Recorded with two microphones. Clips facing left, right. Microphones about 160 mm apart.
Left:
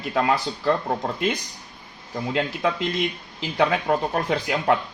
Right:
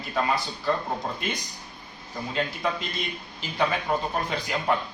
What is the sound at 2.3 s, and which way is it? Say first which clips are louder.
A man's voice: left 4 dB; 80° left.